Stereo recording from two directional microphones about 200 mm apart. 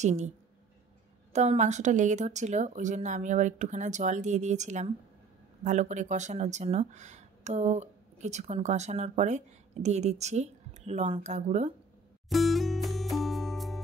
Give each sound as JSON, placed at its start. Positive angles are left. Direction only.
{"t": 0.0, "sound": "speech", "side_deg": -35}
{"t": 1.3, "sound": "speech", "side_deg": -35}
{"t": 12.3, "sound": "music", "side_deg": 0}